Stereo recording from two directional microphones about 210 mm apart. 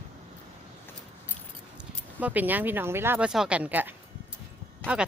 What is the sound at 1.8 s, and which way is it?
Speech, 5° right (ahead or behind).